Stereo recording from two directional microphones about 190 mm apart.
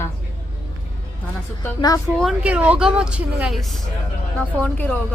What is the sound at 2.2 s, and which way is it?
A woman's voice, 5° right (ahead or behind).